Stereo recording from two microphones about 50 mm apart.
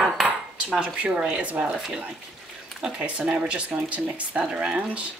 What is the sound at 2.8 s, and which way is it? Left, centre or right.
Speech, centre.